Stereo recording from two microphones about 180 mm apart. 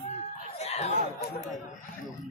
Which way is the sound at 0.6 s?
35° left (ahead or behind).